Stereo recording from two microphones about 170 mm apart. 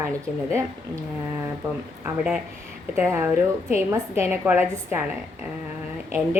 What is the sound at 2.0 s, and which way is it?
Speech, 5° right (ahead or behind).